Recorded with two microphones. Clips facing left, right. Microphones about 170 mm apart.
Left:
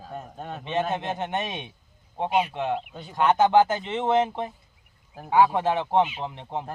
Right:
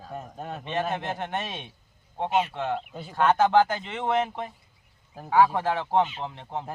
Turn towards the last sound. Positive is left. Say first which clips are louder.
# left 2 dB
turn(degrees=15)  # may be behind; listen again after turning